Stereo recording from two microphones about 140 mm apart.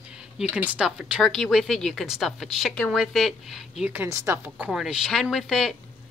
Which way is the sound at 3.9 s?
20° right (ahead or behind).